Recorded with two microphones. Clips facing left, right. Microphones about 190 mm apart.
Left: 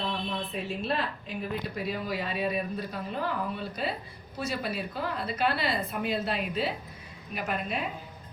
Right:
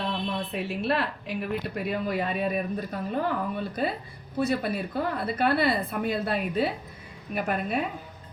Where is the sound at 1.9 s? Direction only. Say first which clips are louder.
Right 6 dB; 55° right (ahead or behind).